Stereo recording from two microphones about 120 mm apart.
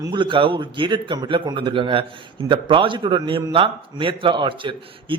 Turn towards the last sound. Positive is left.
turn(degrees=-45)  # may be behind; listen again after turning